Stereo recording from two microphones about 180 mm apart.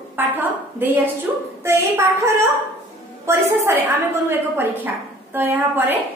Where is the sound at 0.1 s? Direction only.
10° right (ahead or behind).